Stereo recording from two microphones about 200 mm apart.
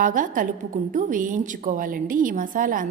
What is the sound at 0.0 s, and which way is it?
A woman's voice, 40° right (ahead or behind).